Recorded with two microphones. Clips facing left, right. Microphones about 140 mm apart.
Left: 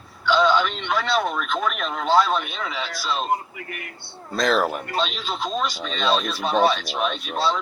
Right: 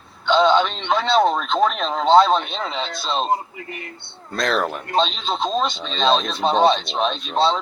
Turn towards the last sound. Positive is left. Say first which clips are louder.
# right 4 dB
turn(degrees=-25)  # may be behind; listen again after turning